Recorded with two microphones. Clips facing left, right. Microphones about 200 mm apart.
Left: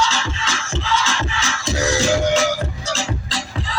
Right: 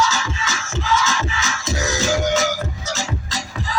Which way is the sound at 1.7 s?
30° left (ahead or behind).